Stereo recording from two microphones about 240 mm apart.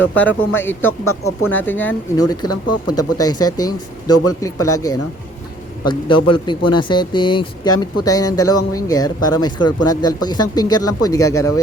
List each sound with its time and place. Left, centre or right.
0.1 s speech: centre
0.9 s speech: left
1.5 s speech: centre
5.8 s a man's voice: centre